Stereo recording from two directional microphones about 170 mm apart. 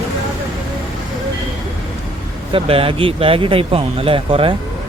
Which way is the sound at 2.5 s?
35° right (ahead or behind).